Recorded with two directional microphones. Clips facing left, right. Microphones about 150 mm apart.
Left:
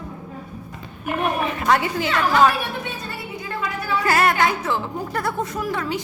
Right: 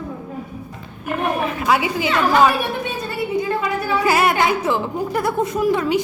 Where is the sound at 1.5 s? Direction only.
5° right (ahead or behind).